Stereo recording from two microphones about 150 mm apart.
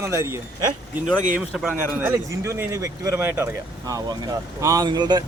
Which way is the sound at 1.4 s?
10° right (ahead or behind).